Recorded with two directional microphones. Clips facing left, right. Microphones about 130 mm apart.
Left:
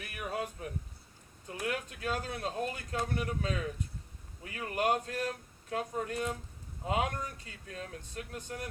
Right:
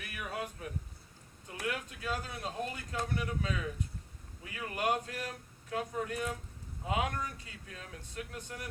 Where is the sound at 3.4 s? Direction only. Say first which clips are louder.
Left 1 dB; 45° left (ahead or behind).